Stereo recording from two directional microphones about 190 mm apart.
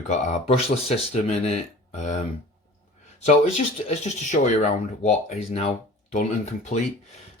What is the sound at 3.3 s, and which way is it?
Speech, 35° left (ahead or behind).